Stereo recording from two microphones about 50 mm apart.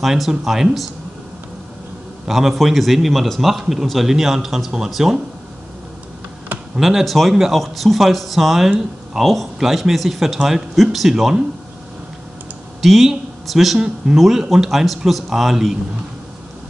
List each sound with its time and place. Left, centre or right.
0.0 s a man's voice: centre
2.2 s a man's voice: centre
6.8 s a man's voice: centre
8.6 s a man's voice: centre
12.8 s speech: centre
13.7 s speech: centre
14.1 s a man's voice: centre